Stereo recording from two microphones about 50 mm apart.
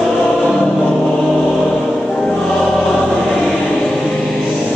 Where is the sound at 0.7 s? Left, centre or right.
Centre.